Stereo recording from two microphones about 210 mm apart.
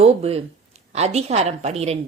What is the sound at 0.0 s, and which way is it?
A woman's voice, 30° right (ahead or behind).